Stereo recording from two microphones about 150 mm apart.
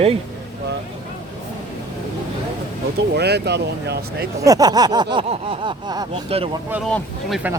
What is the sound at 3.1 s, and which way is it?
Speech, 90° right.